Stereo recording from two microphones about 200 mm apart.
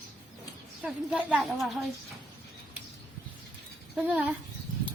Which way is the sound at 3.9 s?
5° right (ahead or behind).